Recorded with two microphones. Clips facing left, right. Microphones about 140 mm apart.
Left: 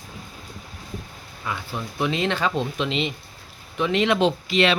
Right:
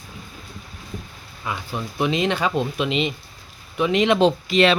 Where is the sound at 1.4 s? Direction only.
20° right (ahead or behind).